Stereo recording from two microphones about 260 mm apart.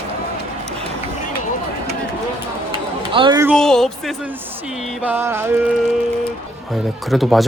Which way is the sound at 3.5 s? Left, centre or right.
Centre.